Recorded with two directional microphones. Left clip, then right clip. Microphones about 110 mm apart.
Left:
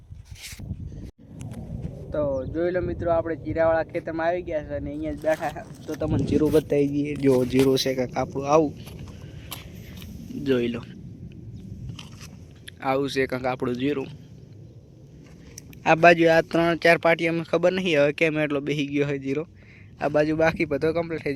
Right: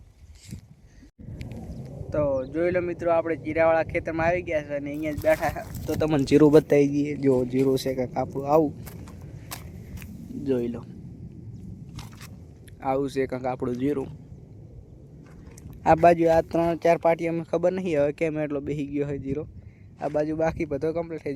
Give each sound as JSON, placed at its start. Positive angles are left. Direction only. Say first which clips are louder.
{"t": 2.0, "sound": "speech", "louder": "right 1 dB", "side_deg": -20}
{"t": 6.7, "sound": "speech", "louder": "right 2 dB", "side_deg": -15}
{"t": 7.4, "sound": "speech", "louder": "left 3 dB", "side_deg": 5}
{"t": 7.7, "sound": "speech", "louder": "left 2 dB", "side_deg": -10}
{"t": 10.0, "sound": "a sound", "louder": "left 2 dB", "side_deg": -5}
{"t": 12.8, "sound": "speech", "louder": "left 2 dB", "side_deg": -10}
{"t": 13.7, "sound": "speech", "louder": "left 1 dB", "side_deg": -25}
{"t": 16.0, "sound": "speech", "louder": "left 4 dB", "side_deg": -15}
{"t": 16.2, "sound": "speech", "louder": "left 2 dB", "side_deg": -5}
{"t": 20.0, "sound": "speech", "louder": "left 4 dB", "side_deg": 15}